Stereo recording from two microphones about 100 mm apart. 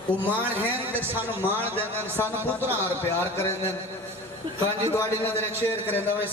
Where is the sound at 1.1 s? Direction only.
20° right (ahead or behind).